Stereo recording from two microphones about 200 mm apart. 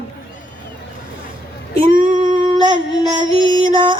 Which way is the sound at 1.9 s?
40° right (ahead or behind).